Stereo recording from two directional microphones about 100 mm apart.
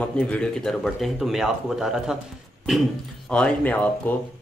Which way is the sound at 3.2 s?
10° left (ahead or behind).